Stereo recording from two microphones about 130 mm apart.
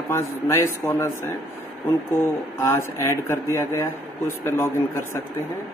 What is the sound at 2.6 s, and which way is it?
Speech, 20° left (ahead or behind).